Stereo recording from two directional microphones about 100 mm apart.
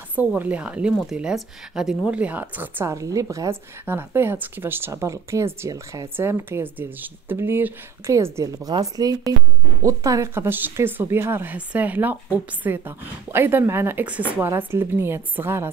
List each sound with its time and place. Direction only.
0.1 s speech: 15° right (ahead or behind)
2.9 s a woman's voice: 35° right (ahead or behind)